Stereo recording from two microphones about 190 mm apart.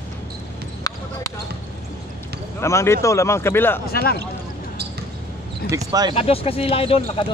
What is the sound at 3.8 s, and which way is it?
Speech, 55° left (ahead or behind).